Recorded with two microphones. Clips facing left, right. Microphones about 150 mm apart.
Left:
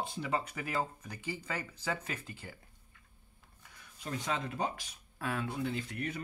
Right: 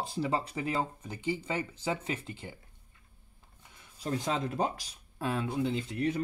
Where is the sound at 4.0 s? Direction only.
35° right (ahead or behind).